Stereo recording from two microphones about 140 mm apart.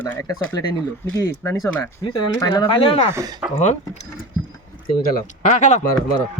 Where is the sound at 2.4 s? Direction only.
30° left (ahead or behind).